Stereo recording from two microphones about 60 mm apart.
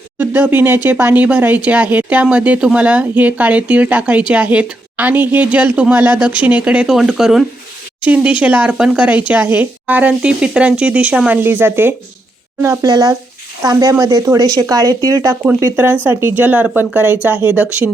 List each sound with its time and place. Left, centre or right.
0.2 s a woman's voice: right; by 6.9 s centre
6.9 s speech: centre
8.0 s a woman's voice: centre
9.0 s a woman's voice: right
11.3 s speech: right
12.8 s speech: right
15.7 s speech: right
16.4 s a woman's voice: right